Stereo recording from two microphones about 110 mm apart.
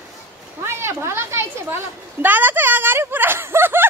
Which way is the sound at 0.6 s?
25° right (ahead or behind).